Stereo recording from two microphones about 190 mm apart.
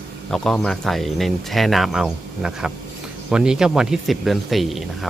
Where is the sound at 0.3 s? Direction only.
Centre (ahead or behind).